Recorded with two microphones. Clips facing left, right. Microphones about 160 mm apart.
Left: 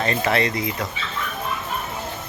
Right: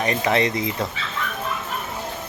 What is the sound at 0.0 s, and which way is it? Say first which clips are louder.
Speech: right 1 dB; 15° right (ahead or behind).